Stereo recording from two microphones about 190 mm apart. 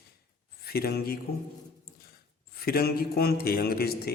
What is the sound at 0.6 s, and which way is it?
Speech, 55° left (ahead or behind).